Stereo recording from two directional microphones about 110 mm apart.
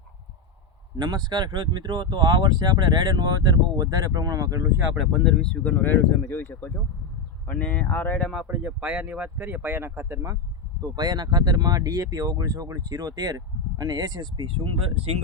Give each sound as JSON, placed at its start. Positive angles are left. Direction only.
{"t": 0.9, "sound": "speech", "side_deg": -40}
{"t": 4.9, "sound": "speech", "side_deg": 0}
{"t": 5.7, "sound": "speech", "side_deg": 20}
{"t": 8.4, "sound": "speech", "side_deg": -15}
{"t": 10.8, "sound": "speech", "side_deg": -35}